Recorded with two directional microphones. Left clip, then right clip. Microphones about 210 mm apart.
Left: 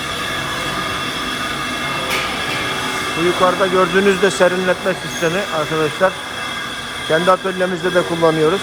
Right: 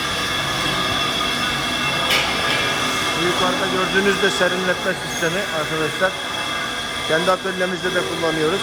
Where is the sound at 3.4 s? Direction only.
5° right (ahead or behind).